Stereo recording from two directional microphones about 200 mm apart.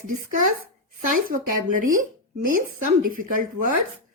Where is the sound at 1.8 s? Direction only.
45° right (ahead or behind).